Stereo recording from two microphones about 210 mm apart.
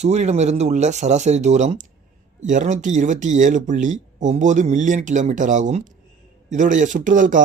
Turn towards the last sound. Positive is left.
turn(degrees=-35)  # may be behind; listen again after turning